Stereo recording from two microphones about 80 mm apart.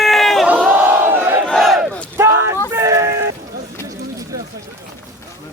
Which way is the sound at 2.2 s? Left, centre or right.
Right.